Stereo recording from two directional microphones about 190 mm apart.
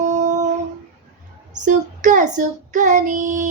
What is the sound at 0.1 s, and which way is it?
Humming, 40° right (ahead or behind).